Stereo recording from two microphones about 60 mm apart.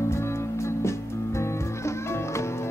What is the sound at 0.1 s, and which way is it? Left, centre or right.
Music, left.